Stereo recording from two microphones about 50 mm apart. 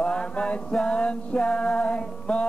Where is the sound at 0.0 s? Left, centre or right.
Left.